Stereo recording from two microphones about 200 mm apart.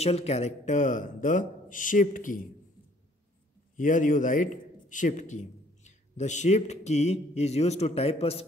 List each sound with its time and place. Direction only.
0.0 s speech: 30° left (ahead or behind)
3.7 s speech: 40° left (ahead or behind)